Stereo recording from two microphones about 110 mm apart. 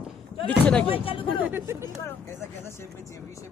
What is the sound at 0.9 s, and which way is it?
Speech, 55° left (ahead or behind).